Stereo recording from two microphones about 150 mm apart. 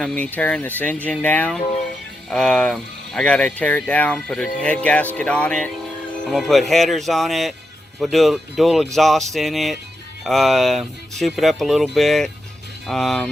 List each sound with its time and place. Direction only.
0.0 s speech: 5° left (ahead or behind)